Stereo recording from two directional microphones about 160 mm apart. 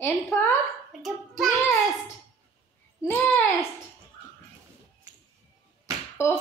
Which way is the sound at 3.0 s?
15° left (ahead or behind).